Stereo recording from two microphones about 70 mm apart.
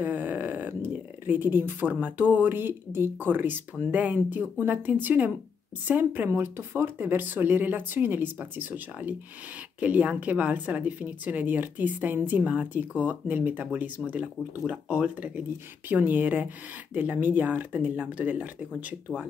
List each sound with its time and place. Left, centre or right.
0.0 s a woman's voice: right